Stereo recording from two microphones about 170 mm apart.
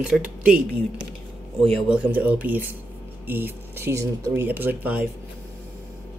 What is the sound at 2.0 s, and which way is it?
Speech, 10° right (ahead or behind).